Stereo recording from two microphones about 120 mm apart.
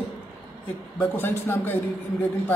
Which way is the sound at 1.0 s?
15° left (ahead or behind).